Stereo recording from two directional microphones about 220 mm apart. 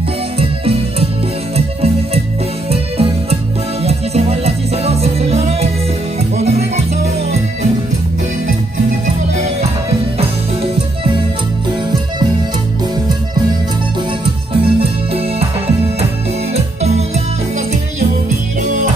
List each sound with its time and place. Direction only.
0.4 s music: 25° right (ahead or behind)
2.7 s music: 25° right (ahead or behind)
9.0 s music: 30° right (ahead or behind)
14.2 s music: 25° right (ahead or behind)